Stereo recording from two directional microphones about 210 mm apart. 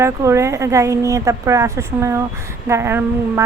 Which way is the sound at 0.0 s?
15° right (ahead or behind).